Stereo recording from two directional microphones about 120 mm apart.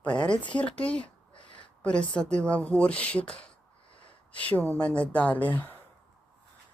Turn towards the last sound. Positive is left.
turn(degrees=15)  # may be behind; listen again after turning